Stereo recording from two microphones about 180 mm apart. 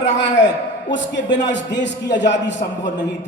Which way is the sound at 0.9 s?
80° left.